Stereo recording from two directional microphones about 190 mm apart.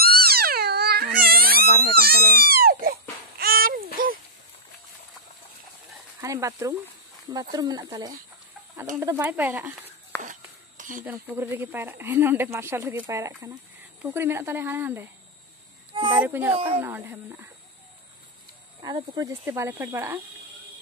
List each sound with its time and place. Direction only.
0.0 s crying: 55° right (ahead or behind)
3.3 s a sound: 50° right (ahead or behind)
6.2 s speech: 15° right (ahead or behind)
10.1 s whispering: 10° left (ahead or behind)
10.8 s a sound: 45° right (ahead or behind)
11.1 s speech: 10° right (ahead or behind)
15.9 s a sound: 25° right (ahead or behind)
16.2 s speech: 10° right (ahead or behind)
18.8 s speech: 20° right (ahead or behind)